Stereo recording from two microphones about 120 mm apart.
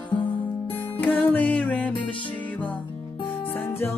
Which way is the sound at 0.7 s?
15° left (ahead or behind).